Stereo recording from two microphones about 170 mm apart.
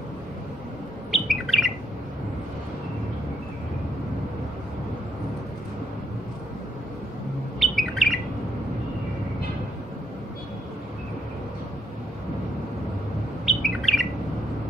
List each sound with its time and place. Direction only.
1.1 s bird: centre (ahead or behind)
7.6 s bird: centre (ahead or behind)
13.5 s bird: centre (ahead or behind)